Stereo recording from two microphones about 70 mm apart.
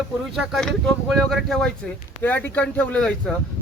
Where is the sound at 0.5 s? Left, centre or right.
Centre.